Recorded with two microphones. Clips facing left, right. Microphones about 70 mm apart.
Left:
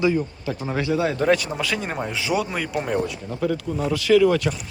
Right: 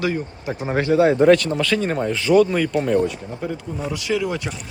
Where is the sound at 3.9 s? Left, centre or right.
Centre.